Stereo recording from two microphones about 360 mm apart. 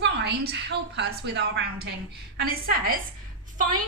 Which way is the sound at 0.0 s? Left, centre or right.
Right.